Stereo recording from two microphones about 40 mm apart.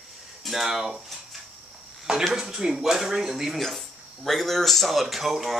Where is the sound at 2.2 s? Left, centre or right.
Centre.